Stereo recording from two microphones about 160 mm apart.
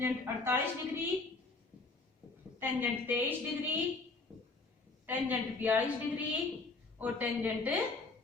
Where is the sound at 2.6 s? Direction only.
15° right (ahead or behind).